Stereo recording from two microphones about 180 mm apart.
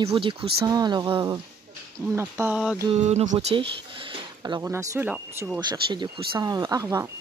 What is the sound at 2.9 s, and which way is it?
Speech, 40° right (ahead or behind).